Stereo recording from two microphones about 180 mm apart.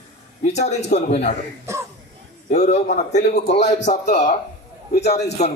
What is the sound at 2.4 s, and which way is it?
A man's voice, 40° left (ahead or behind).